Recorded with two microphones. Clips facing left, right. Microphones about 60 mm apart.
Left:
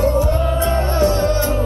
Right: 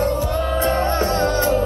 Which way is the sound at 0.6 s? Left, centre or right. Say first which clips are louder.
Left 2 dB; right.